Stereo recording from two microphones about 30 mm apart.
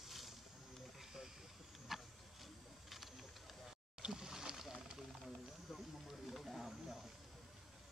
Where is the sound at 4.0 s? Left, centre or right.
Right.